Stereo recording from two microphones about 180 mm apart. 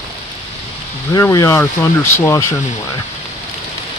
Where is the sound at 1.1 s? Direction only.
20° left (ahead or behind).